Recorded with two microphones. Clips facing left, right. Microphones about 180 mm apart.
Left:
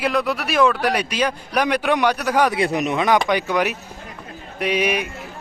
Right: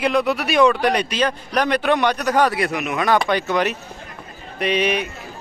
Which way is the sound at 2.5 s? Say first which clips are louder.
Left 2 dB; 30° left (ahead or behind).